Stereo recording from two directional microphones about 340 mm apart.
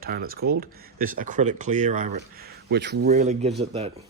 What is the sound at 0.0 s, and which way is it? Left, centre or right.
Speech, right.